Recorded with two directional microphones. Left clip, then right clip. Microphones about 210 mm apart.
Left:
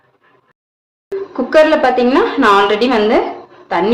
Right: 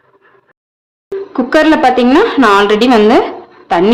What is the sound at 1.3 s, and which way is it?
A woman's voice, 35° right (ahead or behind).